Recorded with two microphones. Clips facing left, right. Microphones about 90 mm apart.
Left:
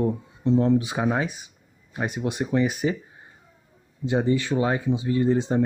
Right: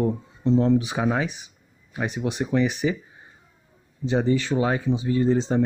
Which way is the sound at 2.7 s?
45° left (ahead or behind).